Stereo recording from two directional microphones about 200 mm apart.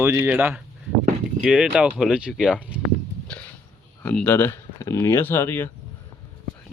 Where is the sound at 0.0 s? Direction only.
10° right (ahead or behind).